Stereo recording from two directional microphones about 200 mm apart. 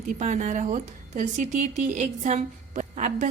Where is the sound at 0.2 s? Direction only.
35° right (ahead or behind).